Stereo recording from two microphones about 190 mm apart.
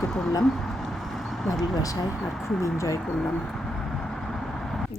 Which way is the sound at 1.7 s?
20° left (ahead or behind).